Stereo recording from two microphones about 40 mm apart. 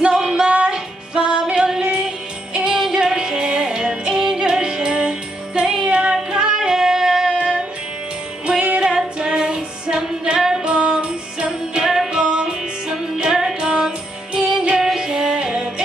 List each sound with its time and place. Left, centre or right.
0.1 s music: centre
1.5 s female singing: centre
2.5 s music: centre
5.9 s child singing: right
6.3 s music: centre
7.3 s music: right
8.7 s female singing: centre
11.0 s music: centre